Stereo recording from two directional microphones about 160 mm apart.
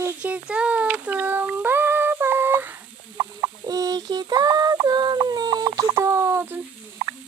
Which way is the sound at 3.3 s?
25° right (ahead or behind).